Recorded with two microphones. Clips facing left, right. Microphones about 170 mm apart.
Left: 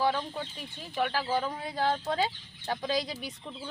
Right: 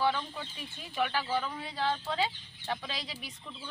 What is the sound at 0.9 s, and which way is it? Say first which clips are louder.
Speech: left 2 dB; 35° left (ahead or behind).